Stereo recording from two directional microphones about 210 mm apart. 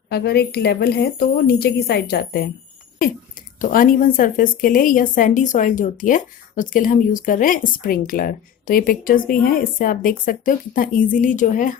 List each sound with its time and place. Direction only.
0.1 s a woman's voice: 50° left (ahead or behind)
3.6 s a woman's voice: 40° left (ahead or behind)